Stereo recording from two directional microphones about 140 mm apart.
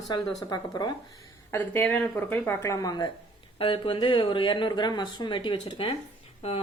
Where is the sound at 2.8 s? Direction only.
30° left (ahead or behind).